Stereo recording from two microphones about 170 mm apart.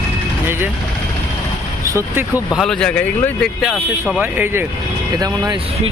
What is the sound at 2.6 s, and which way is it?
Speech, 5° left (ahead or behind).